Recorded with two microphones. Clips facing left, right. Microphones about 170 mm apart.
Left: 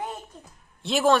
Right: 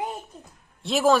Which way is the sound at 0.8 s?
Centre (ahead or behind).